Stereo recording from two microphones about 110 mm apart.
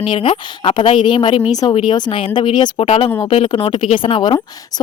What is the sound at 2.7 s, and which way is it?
Speech, 60° left (ahead or behind).